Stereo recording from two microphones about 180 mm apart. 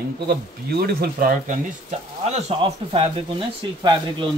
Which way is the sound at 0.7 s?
60° right (ahead or behind).